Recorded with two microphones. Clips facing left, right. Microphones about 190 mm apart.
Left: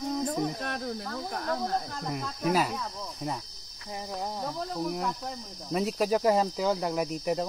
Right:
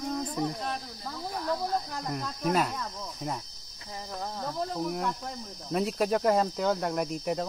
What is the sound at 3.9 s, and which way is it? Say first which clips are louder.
Cricket: left 2 dB; 15° left (ahead or behind).